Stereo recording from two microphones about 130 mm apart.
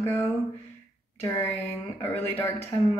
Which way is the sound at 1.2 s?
15° left (ahead or behind).